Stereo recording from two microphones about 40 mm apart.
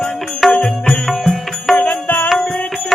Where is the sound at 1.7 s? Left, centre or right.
Left.